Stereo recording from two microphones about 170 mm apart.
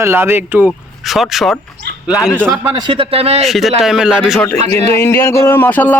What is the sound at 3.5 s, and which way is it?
Speech, centre (ahead or behind).